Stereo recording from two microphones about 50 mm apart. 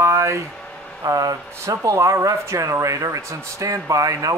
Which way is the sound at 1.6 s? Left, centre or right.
Right.